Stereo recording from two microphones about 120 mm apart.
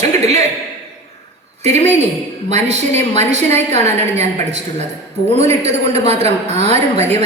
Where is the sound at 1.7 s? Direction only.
70° right (ahead or behind).